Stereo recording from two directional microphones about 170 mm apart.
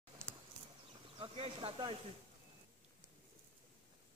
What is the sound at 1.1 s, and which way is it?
Speech, 30° right (ahead or behind).